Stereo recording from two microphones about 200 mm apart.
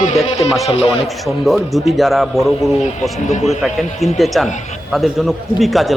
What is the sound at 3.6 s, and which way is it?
Speech, centre (ahead or behind).